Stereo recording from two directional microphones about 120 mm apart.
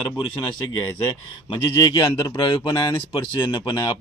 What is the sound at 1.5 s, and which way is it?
Speech, 35° left (ahead or behind).